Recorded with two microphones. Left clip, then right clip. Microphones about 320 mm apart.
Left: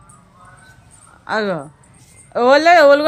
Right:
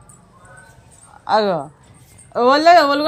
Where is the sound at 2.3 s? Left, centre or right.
Centre.